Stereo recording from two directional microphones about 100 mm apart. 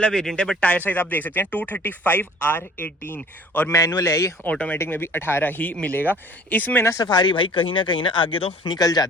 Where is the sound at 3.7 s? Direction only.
30° left (ahead or behind).